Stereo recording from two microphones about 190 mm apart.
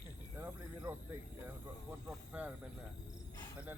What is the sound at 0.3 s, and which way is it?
Speech, 10° right (ahead or behind).